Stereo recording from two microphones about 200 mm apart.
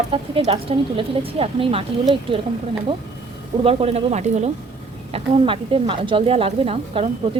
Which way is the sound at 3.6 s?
30° right (ahead or behind).